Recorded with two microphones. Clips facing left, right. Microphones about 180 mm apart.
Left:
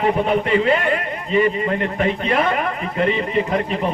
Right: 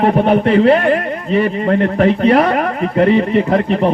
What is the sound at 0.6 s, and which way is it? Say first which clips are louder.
Speech: right 7 dB; 40° right (ahead or behind).